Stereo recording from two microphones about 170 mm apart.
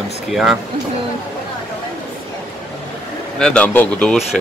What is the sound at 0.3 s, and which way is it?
Speech, centre (ahead or behind).